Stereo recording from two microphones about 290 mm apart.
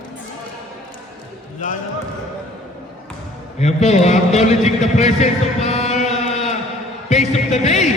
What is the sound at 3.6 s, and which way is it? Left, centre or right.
A man's voice, left.